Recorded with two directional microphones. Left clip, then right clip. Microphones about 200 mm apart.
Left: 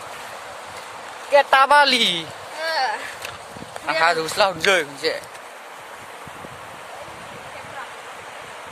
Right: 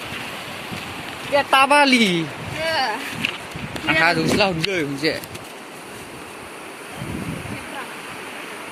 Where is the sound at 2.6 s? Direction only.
40° left (ahead or behind).